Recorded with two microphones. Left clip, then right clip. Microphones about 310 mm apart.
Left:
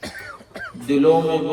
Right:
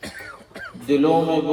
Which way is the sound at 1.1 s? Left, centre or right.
Right.